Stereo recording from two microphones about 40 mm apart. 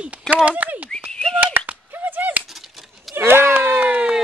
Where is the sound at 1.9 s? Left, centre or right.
Right.